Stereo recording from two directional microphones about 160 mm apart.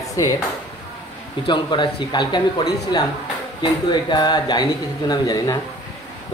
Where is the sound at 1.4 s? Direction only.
30° left (ahead or behind).